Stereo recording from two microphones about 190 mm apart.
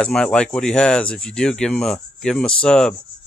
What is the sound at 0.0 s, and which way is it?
Speech, 5° left (ahead or behind).